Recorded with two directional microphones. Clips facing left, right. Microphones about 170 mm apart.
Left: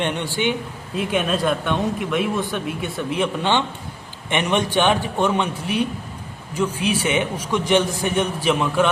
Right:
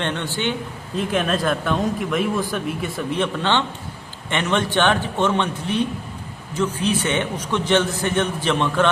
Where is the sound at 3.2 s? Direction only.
15° left (ahead or behind).